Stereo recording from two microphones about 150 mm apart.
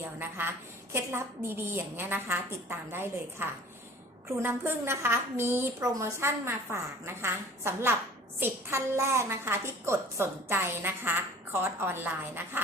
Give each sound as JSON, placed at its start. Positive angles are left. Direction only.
{"t": 0.0, "sound": "a woman's voice", "side_deg": -15}